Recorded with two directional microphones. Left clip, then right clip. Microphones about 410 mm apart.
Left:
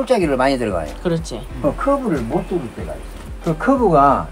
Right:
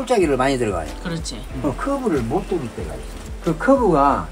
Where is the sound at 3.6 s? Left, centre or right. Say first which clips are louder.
Left 2 dB; centre.